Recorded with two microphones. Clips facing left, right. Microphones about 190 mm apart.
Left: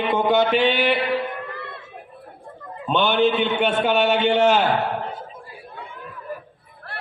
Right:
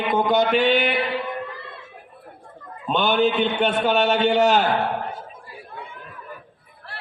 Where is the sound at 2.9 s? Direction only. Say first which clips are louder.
Left 1 dB; 40° right (ahead or behind).